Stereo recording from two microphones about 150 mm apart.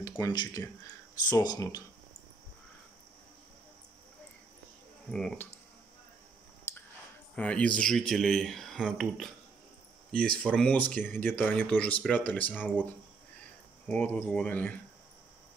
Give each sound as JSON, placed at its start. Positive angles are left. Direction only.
{"t": 0.2, "sound": "speech", "side_deg": 25}
{"t": 5.1, "sound": "speech", "side_deg": 5}
{"t": 7.3, "sound": "speech", "side_deg": 10}
{"t": 10.5, "sound": "speech", "side_deg": 5}
{"t": 13.8, "sound": "speech", "side_deg": 10}